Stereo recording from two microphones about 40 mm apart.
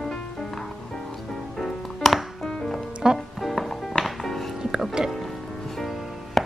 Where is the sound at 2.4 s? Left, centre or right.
Centre.